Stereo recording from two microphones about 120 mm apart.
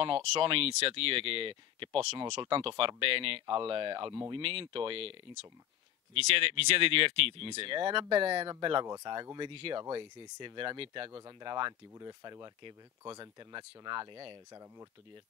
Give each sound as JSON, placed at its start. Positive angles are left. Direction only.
{"t": 0.0, "sound": "speech", "side_deg": -50}
{"t": 6.1, "sound": "speech", "side_deg": -55}
{"t": 11.1, "sound": "speech", "side_deg": -35}